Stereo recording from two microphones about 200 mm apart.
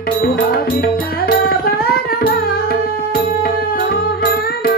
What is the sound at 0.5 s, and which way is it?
Music, 50° left (ahead or behind).